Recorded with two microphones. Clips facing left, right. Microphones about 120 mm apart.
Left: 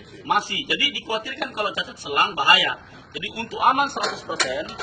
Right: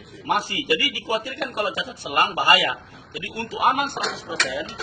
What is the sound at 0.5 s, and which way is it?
Speech, 55° right (ahead or behind).